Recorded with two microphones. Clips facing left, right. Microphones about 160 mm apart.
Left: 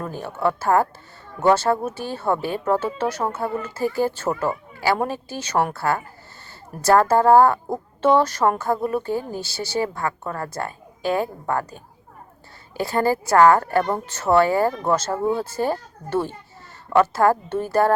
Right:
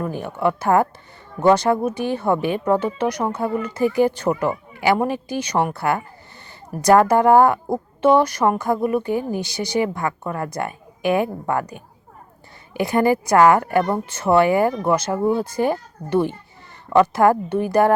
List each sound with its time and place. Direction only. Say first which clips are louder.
0.0 s a woman's voice: right 2 dB; 15° right (ahead or behind)